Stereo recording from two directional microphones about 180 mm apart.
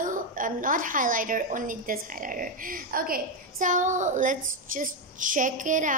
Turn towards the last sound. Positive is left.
turn(degrees=-45)  # may be behind; listen again after turning